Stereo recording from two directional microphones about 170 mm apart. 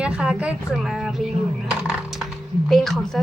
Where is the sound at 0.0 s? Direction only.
5° right (ahead or behind).